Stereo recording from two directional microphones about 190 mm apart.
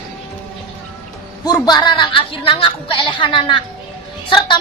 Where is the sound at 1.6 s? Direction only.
20° left (ahead or behind).